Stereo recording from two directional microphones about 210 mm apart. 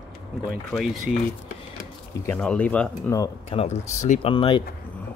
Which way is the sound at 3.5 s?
30° left (ahead or behind).